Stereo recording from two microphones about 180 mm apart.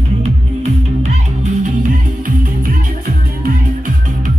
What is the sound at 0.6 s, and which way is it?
Music, 40° right (ahead or behind).